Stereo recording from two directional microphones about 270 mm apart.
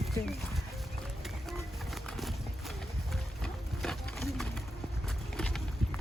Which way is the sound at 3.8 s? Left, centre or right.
Centre.